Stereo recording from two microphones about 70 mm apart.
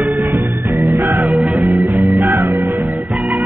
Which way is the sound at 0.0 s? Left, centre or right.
Right.